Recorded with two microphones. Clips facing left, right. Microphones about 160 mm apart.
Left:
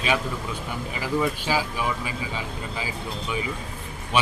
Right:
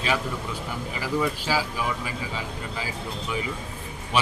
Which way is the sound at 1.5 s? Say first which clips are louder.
Left 1 dB; 20° left (ahead or behind).